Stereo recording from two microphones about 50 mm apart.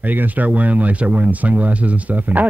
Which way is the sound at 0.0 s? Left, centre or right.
Right.